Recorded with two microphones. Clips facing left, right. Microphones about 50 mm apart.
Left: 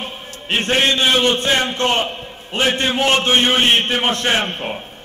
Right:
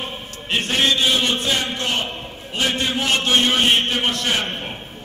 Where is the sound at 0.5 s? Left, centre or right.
Left.